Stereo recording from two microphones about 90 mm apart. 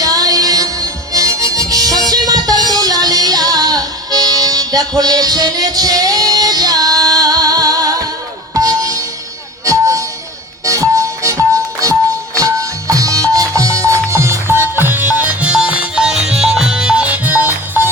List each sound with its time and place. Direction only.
0.0 s music: 40° right (ahead or behind); by 17.8 s 20° right (ahead or behind)